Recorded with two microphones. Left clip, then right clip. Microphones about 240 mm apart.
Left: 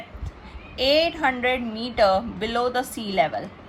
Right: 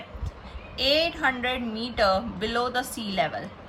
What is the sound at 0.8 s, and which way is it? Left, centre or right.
A woman's voice, centre.